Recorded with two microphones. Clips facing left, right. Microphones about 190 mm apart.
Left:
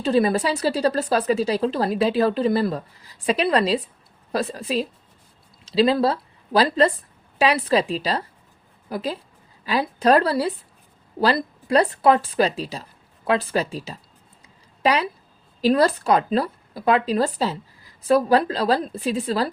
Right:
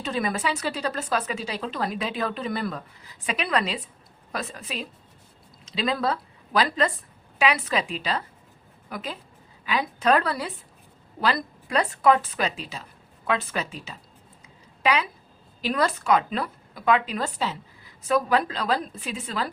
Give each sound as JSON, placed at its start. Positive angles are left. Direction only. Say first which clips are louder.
{"t": 0.0, "sound": "a woman's voice", "louder": "left 8 dB", "side_deg": 30}